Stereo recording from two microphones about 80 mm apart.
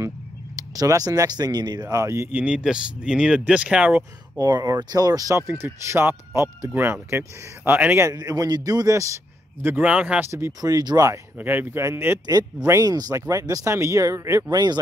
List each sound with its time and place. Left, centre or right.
0.6 s a man's voice: right
2.3 s speech: centre
4.4 s a man's voice: right
5.5 s speech: right
8.0 s a man's voice: right
9.8 s speech: centre
10.6 s a man's voice: right
11.3 s a man's voice: right
12.8 s speech: right
14.5 s speech: right